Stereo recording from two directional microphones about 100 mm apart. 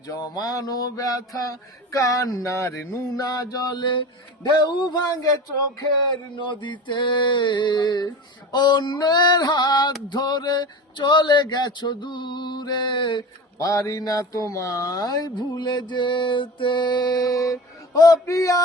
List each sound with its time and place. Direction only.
0.1 s speech: 40° left (ahead or behind)
6.3 s speech: 50° left (ahead or behind)
13.6 s speech: 30° left (ahead or behind)